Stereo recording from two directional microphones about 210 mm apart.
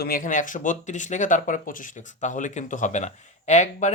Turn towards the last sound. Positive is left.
turn(degrees=35)  # may be behind; listen again after turning